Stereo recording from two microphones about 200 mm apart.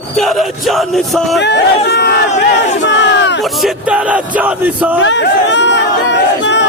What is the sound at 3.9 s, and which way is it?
Crowd, 5° right (ahead or behind).